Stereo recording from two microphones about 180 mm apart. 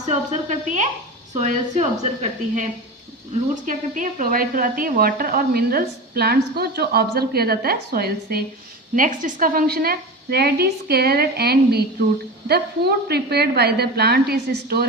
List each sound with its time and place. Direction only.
0.1 s a woman's voice: 40° right (ahead or behind)
3.5 s a woman's voice: 45° right (ahead or behind)
9.0 s a woman's voice: 45° right (ahead or behind)